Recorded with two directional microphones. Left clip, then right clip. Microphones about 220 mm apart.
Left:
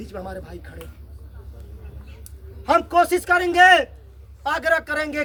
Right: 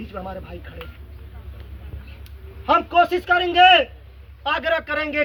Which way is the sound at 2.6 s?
25° left (ahead or behind).